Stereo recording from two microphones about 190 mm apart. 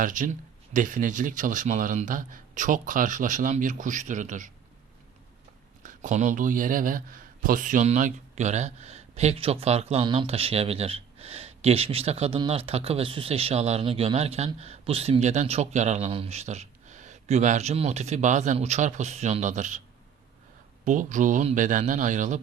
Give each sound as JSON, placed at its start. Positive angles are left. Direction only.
{"t": 0.0, "sound": "speech", "side_deg": -45}
{"t": 5.8, "sound": "speech", "side_deg": -40}
{"t": 20.8, "sound": "speech", "side_deg": -40}